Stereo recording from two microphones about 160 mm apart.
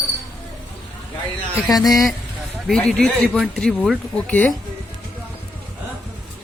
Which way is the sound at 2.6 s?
5° left (ahead or behind).